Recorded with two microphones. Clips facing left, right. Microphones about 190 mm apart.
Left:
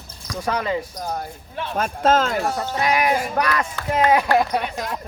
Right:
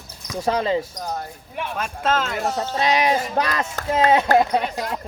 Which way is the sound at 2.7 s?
25° right (ahead or behind).